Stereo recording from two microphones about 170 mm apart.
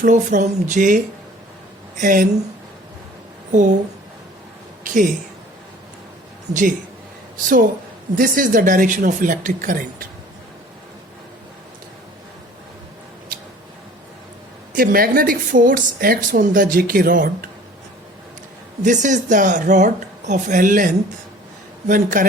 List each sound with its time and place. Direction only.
0.0 s speech: 50° right (ahead or behind)
3.5 s speech: 45° right (ahead or behind)
6.5 s speech: 50° right (ahead or behind)
8.1 s speech: 55° right (ahead or behind)
14.7 s speech: 60° right (ahead or behind)
18.8 s speech: 45° right (ahead or behind)